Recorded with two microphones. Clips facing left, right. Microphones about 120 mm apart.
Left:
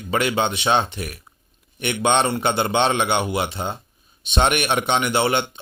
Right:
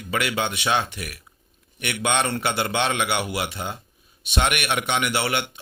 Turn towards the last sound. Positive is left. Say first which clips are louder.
# left 4 dB
turn(degrees=25)  # may be behind; listen again after turning